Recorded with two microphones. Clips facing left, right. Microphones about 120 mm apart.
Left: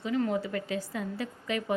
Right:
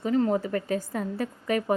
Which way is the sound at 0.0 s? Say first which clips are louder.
Right 5 dB; 40° right (ahead or behind).